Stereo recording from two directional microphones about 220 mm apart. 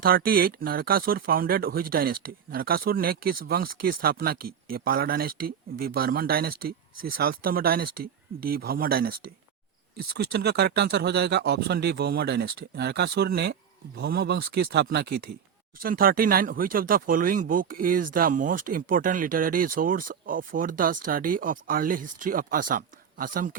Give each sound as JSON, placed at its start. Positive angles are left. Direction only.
{"t": 0.0, "sound": "speech", "side_deg": -40}